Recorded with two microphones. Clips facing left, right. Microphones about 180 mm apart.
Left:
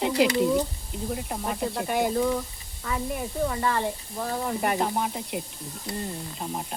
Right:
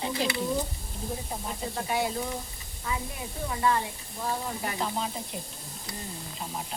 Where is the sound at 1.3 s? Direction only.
60° left (ahead or behind).